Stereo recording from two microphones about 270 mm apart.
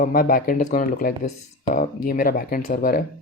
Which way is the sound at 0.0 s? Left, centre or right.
Left.